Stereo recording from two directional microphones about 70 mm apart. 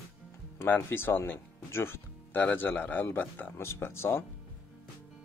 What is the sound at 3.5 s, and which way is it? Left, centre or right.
Speech, left.